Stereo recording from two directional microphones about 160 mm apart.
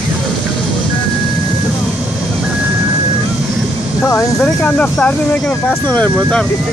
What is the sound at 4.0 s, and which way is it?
Speech, 15° left (ahead or behind).